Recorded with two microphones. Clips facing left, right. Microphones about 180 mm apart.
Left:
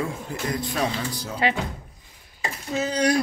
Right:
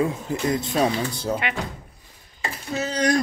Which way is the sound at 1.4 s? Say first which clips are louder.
Left 6 dB; 35° left (ahead or behind).